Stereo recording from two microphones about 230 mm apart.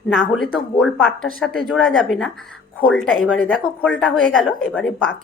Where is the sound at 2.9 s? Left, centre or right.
Left.